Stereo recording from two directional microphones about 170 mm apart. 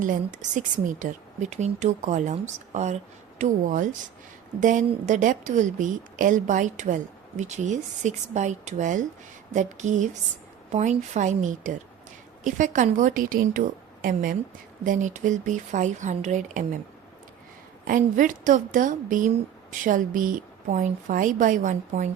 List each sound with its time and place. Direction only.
0.0 s a woman's voice: 50° right (ahead or behind)
17.8 s a woman's voice: 50° right (ahead or behind)